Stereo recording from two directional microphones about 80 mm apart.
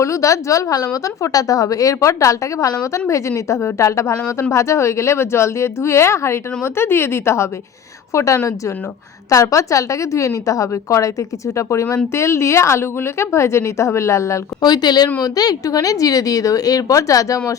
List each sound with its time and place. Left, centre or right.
0.0 s a woman's voice: left
14.6 s a woman's voice: left